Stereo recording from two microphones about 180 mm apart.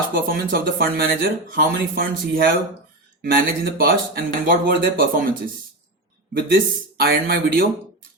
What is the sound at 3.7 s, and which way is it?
Speech, 55° right (ahead or behind).